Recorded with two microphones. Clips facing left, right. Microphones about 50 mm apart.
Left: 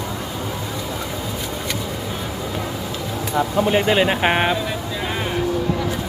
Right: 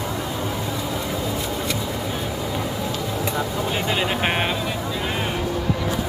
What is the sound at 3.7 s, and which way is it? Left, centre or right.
Speech, left.